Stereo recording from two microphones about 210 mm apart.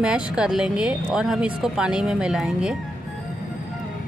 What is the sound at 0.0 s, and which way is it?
Speech, 5° right (ahead or behind).